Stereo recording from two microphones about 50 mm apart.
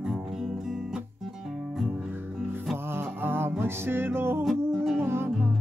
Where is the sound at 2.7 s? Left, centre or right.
Right.